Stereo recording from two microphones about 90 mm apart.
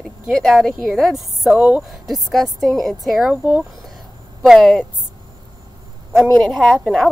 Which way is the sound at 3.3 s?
15° right (ahead or behind).